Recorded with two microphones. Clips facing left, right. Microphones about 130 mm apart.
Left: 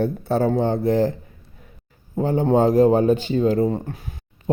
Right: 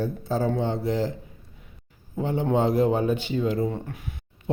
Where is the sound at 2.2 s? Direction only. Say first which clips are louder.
Left 6 dB; 40° left (ahead or behind).